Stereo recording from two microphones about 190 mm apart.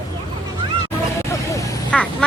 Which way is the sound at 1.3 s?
15° left (ahead or behind).